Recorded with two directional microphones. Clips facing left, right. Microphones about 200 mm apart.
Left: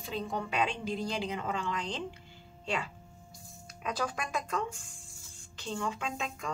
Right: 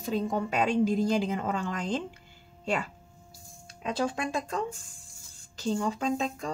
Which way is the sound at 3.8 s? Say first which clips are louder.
Right 5 dB; 25° right (ahead or behind).